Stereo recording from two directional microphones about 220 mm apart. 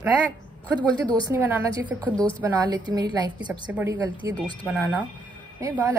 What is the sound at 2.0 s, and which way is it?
Speech, 5° left (ahead or behind).